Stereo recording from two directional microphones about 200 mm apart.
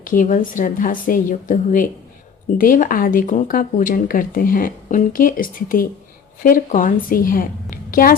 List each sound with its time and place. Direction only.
0.0 s a woman's voice: 40° left (ahead or behind)